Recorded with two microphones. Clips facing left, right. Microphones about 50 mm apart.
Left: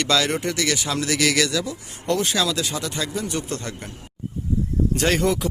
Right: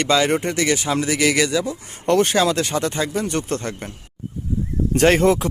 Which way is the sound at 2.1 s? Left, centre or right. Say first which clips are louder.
Right 5 dB; right.